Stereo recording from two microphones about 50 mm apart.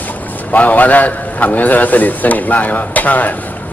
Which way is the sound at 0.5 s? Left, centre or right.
Left.